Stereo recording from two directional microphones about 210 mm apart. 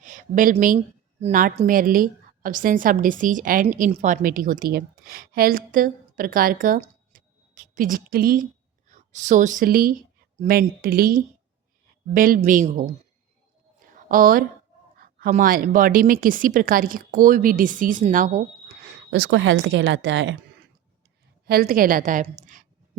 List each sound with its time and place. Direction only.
0.0 s a woman's voice: 35° right (ahead or behind)
13.7 s a sound: 40° right (ahead or behind)
15.2 s a woman's voice: 40° right (ahead or behind)
18.9 s a woman's voice: 55° right (ahead or behind)
21.4 s a woman's voice: 45° right (ahead or behind)